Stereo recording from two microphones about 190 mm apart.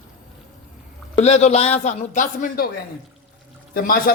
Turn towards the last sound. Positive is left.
turn(degrees=50)  # may be behind; listen again after turning